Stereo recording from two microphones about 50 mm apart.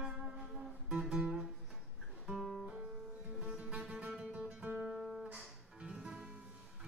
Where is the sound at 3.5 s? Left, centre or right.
Right.